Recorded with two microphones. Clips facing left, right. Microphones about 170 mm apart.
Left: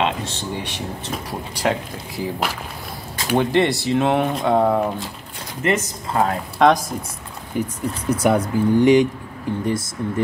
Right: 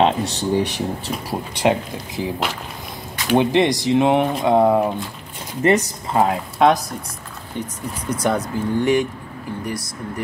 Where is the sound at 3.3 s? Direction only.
15° right (ahead or behind).